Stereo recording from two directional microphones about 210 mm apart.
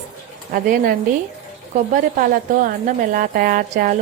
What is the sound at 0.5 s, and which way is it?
A woman's voice, 40° right (ahead or behind).